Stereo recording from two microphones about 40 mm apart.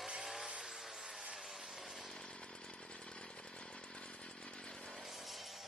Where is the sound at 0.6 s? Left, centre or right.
Centre.